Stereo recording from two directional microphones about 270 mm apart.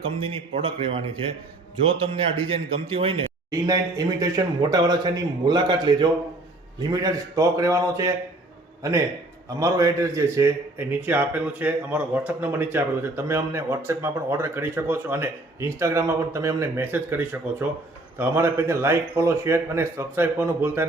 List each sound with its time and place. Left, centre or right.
0.0 s a man's voice: right